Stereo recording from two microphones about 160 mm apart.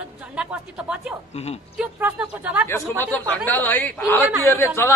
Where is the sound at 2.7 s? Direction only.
10° left (ahead or behind).